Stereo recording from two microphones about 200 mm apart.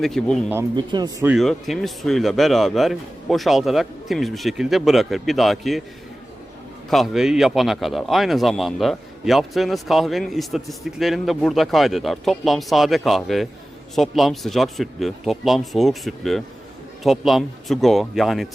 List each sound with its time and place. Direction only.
0.0 s speech: centre (ahead or behind)
0.5 s speech: 20° right (ahead or behind)
1.2 s speech: 5° right (ahead or behind)
6.9 s speech: centre (ahead or behind)